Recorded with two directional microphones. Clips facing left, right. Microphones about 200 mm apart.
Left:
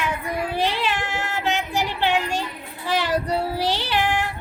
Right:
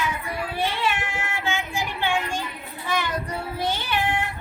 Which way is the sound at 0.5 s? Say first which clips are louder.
Even; 75° left (ahead or behind).